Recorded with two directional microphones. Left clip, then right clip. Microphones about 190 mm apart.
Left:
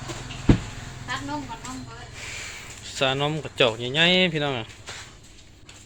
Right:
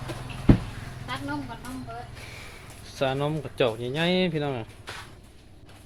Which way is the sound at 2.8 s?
Centre (ahead or behind).